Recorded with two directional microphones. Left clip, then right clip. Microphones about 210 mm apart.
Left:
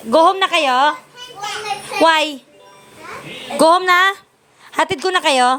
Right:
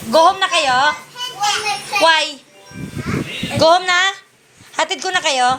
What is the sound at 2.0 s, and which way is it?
Speech, 45° left (ahead or behind).